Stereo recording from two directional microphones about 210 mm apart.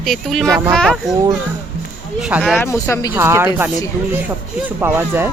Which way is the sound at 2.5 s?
10° left (ahead or behind).